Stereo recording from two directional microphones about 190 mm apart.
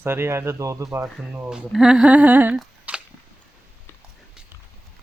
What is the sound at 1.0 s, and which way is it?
Speech, 5° right (ahead or behind).